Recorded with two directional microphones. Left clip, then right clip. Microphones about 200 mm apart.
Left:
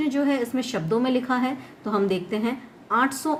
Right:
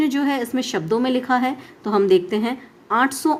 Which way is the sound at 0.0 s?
45° right (ahead or behind).